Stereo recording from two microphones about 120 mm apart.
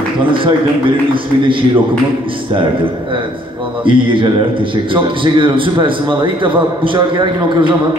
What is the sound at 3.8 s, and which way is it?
A man's voice, 45° right (ahead or behind).